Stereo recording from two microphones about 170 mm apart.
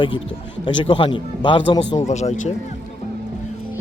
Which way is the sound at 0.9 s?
30° left (ahead or behind).